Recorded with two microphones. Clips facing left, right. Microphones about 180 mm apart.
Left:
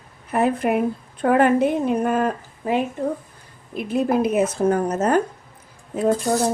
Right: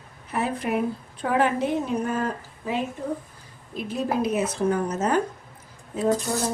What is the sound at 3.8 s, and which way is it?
A woman's voice, 60° left (ahead or behind).